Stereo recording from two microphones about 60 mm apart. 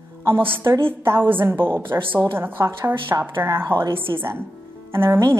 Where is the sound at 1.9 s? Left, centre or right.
Right.